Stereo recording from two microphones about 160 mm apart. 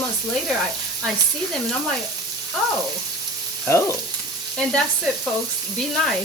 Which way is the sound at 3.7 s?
15° left (ahead or behind).